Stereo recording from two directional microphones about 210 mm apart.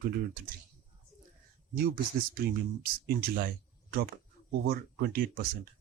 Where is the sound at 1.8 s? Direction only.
45° right (ahead or behind).